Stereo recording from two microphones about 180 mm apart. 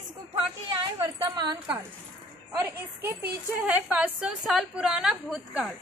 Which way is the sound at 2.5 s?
10° right (ahead or behind).